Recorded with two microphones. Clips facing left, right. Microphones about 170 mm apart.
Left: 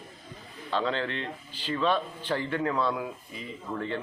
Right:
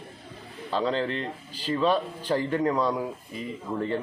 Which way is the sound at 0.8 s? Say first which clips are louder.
Right 3 dB; 35° right (ahead or behind).